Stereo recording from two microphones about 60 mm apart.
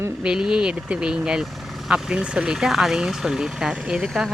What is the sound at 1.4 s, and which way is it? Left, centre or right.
Vehicle, centre.